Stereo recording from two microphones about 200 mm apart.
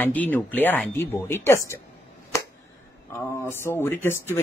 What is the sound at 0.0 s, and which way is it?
Speech, 10° left (ahead or behind).